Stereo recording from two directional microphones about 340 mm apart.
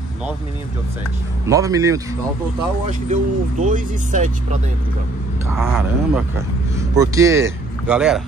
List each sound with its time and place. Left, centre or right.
1.5 s a man's voice: centre
2.9 s speech: right
5.6 s a man's voice: centre